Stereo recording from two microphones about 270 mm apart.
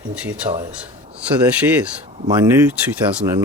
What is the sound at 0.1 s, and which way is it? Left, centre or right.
Speech, centre.